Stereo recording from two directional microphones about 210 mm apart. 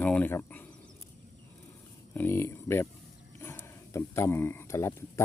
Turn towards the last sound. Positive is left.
turn(degrees=15)  # may be behind; listen again after turning